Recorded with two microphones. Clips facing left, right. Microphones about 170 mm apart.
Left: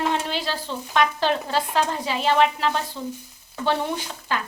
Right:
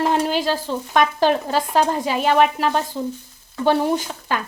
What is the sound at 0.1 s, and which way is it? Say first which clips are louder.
Speech: right 6 dB; 45° right (ahead or behind).